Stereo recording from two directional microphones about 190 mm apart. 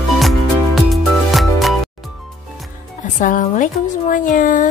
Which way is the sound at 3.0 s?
40° left (ahead or behind).